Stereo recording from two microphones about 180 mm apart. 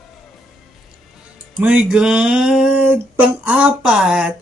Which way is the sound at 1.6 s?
5° right (ahead or behind).